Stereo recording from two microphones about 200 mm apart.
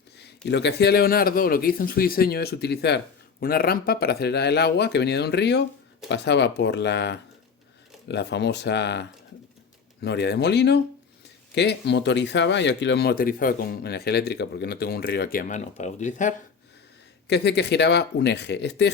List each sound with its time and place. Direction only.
0.2 s speech: 55° left (ahead or behind); by 16.3 s 40° left (ahead or behind)
17.2 s speech: 60° left (ahead or behind)